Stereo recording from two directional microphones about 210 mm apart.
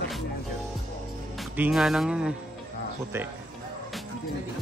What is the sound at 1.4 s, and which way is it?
Speech, centre (ahead or behind).